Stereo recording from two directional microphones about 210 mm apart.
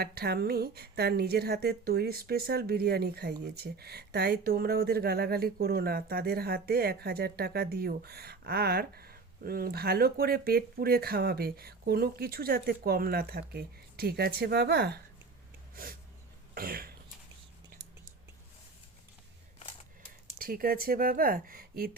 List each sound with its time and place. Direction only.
0.0 s a woman's voice: 50° right (ahead or behind)
15.7 s a sound: 45° right (ahead or behind)
16.6 s a woman's voice: 45° right (ahead or behind)
20.4 s a woman's voice: 45° right (ahead or behind)